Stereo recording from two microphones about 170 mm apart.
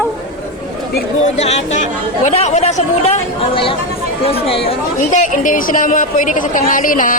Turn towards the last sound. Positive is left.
turn(degrees=50)  # may be behind; listen again after turning